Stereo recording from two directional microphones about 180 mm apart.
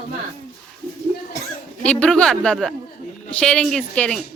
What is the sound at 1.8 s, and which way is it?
A woman's voice, 5° left (ahead or behind).